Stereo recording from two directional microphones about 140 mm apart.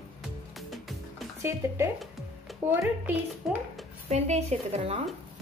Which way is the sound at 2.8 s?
5° right (ahead or behind).